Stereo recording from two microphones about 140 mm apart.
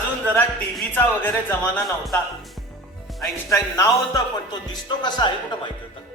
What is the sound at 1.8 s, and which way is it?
Music, centre (ahead or behind).